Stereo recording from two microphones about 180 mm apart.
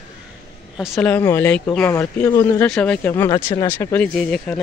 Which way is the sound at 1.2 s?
15° left (ahead or behind).